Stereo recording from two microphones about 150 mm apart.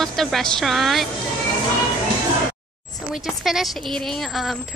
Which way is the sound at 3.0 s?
5° right (ahead or behind).